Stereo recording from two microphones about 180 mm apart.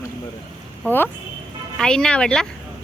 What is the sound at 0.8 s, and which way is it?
A woman's voice, 10° left (ahead or behind).